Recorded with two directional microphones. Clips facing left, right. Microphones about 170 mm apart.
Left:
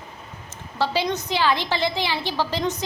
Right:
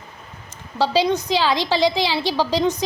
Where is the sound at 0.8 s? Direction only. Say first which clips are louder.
Right 5 dB; 15° right (ahead or behind).